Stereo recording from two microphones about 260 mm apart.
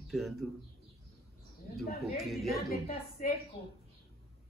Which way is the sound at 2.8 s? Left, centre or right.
Left.